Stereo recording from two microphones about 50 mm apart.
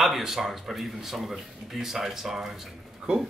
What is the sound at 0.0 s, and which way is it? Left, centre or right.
Speech, centre.